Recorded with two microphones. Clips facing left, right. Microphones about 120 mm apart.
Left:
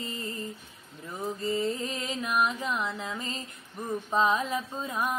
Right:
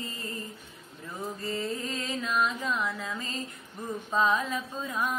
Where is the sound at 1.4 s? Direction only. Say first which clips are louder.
Left 4 dB; 20° left (ahead or behind).